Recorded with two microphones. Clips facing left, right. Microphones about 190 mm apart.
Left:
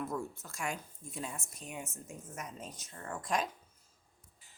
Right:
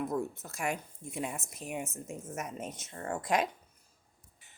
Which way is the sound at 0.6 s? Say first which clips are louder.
Right 4 dB; 60° right (ahead or behind).